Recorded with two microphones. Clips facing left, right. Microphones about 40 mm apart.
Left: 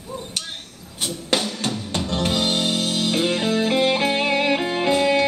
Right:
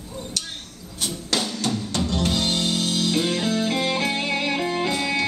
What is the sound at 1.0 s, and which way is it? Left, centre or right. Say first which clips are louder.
Music: left 3 dB; left.